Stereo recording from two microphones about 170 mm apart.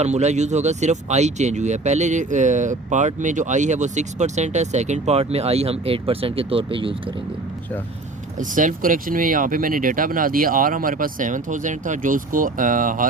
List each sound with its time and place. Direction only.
0.0 s speech: 40° right (ahead or behind)
8.4 s speech: 50° right (ahead or behind)